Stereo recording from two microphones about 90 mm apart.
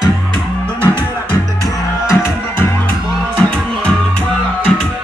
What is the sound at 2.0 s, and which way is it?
Music, 25° left (ahead or behind).